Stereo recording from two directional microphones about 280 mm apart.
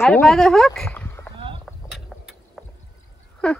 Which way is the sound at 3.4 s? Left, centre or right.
Centre.